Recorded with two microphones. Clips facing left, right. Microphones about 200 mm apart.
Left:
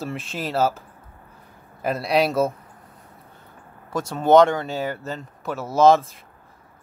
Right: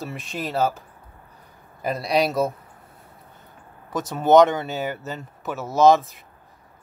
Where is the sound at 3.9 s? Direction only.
Centre (ahead or behind).